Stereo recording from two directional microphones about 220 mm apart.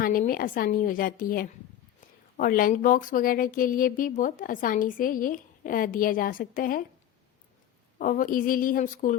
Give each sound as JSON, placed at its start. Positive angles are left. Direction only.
{"t": 0.0, "sound": "speech", "side_deg": 40}
{"t": 7.9, "sound": "speech", "side_deg": 40}